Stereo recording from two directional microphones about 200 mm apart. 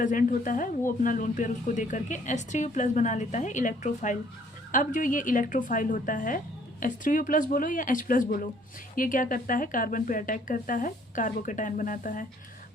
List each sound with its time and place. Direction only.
0.0 s a woman's voice: 40° left (ahead or behind)